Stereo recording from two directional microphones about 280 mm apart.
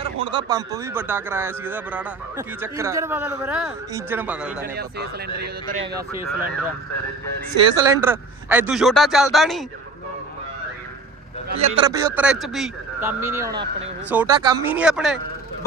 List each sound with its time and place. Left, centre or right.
0.0 s speech: centre
4.7 s speech: right
5.8 s speech: centre
7.5 s a man's voice: centre
11.5 s speech: centre